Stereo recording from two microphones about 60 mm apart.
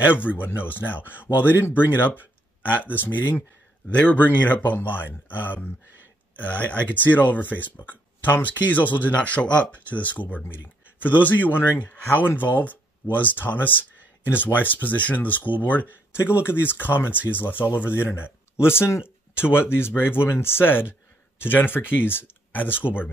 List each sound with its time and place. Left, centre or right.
0.0 s speech: left
16.4 s speech: left
19.3 s speech: left